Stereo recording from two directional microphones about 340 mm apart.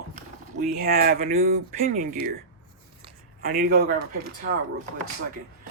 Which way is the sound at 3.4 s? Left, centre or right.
Right.